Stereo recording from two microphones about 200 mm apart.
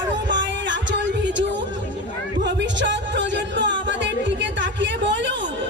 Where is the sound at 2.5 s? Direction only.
60° right (ahead or behind).